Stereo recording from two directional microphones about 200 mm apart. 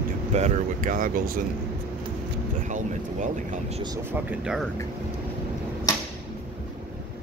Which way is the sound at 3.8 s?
20° right (ahead or behind).